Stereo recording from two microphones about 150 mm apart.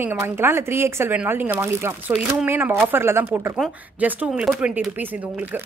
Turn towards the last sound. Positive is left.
turn(degrees=-10)  # may be behind; listen again after turning